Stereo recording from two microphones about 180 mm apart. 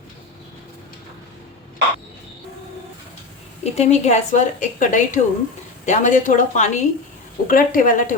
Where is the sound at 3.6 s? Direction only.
40° left (ahead or behind).